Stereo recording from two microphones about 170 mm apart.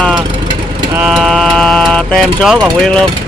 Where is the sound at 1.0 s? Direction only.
Centre (ahead or behind).